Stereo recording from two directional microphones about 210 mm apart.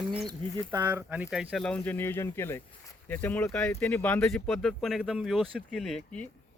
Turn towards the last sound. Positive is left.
turn(degrees=0)  # may be behind; listen again after turning